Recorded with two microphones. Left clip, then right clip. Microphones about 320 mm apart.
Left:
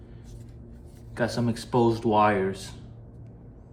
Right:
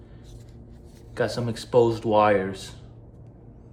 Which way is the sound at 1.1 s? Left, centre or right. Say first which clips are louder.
Right 1 dB; centre.